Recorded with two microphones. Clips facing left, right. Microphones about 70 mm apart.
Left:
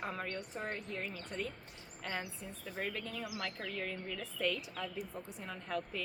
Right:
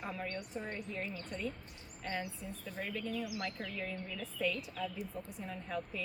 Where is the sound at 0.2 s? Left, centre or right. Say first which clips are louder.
Even; left.